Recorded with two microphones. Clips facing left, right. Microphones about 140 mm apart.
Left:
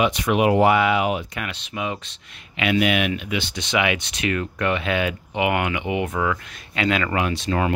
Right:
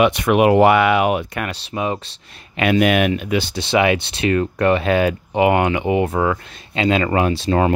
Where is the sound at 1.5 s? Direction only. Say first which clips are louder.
Right 5 dB; 35° right (ahead or behind).